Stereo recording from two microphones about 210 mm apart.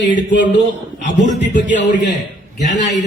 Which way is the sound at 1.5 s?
60° left (ahead or behind).